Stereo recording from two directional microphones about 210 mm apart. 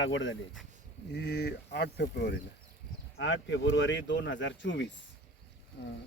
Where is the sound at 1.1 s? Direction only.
55° left (ahead or behind).